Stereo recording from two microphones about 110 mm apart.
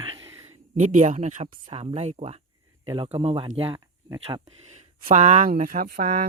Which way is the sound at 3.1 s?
65° right (ahead or behind).